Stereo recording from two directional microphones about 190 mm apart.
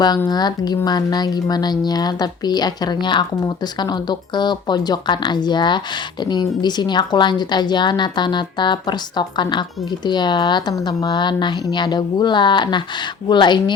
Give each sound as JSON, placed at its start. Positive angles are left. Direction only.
{"t": 0.3, "sound": "speech", "side_deg": 20}